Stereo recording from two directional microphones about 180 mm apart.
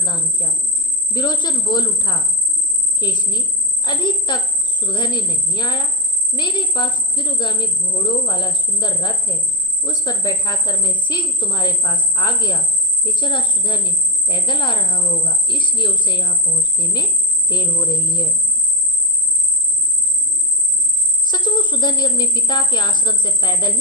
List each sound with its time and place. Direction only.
0.0 s a woman's voice: 25° left (ahead or behind)
21.2 s a woman's voice: 25° left (ahead or behind)